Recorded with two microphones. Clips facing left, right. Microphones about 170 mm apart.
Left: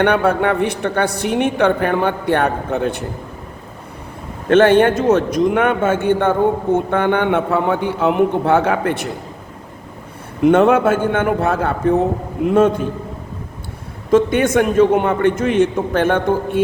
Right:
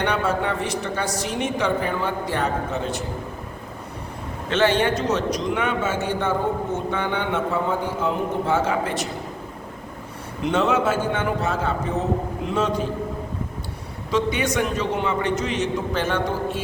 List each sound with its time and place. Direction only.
0.0 s a woman's voice: 60° left (ahead or behind)
4.4 s a woman's voice: 55° left (ahead or behind)
10.4 s a woman's voice: 55° left (ahead or behind)
14.1 s a man's voice: 50° left (ahead or behind)